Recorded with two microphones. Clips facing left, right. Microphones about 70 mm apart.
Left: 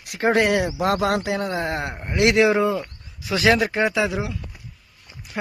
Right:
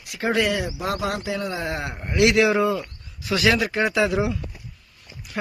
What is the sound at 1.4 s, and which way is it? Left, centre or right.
Speech, left.